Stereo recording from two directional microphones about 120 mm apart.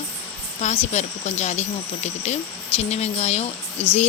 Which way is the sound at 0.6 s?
65° left (ahead or behind).